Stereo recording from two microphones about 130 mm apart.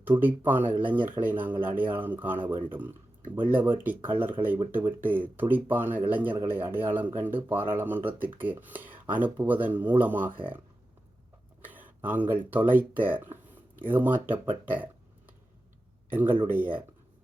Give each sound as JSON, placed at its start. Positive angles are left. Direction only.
{"t": 0.2, "sound": "speech", "side_deg": -15}
{"t": 11.6, "sound": "a sound", "side_deg": -15}
{"t": 12.5, "sound": "speech", "side_deg": -15}
{"t": 16.0, "sound": "speech", "side_deg": -15}